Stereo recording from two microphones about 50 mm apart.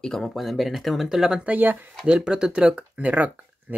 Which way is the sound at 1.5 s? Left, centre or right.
Right.